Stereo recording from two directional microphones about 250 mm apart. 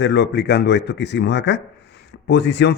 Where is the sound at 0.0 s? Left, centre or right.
Left.